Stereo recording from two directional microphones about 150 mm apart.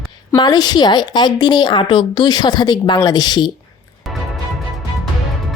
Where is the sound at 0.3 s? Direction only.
25° left (ahead or behind).